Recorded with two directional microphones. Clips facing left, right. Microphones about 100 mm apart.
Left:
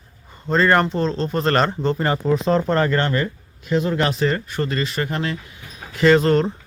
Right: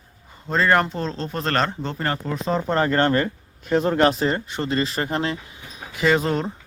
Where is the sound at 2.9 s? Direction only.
35° right (ahead or behind).